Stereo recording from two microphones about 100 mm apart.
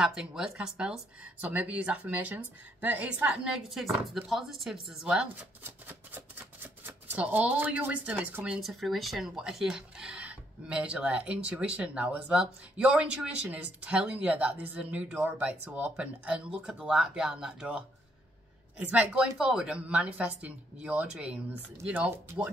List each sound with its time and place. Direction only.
0.0 s speech: 5° right (ahead or behind)
5.6 s speech: 20° right (ahead or behind)
8.5 s speech: centre (ahead or behind)